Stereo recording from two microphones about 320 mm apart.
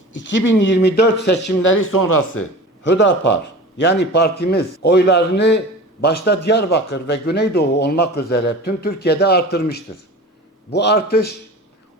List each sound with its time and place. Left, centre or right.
0.1 s a man's voice: left
2.0 s speech: left
2.3 s a man's voice: left